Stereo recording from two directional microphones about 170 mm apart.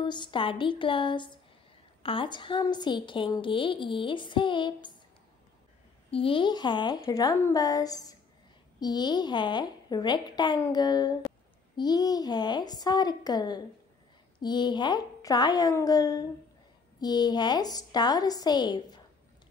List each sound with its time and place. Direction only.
0.0 s a woman's voice: 25° left (ahead or behind)
6.0 s a woman's voice: 35° left (ahead or behind)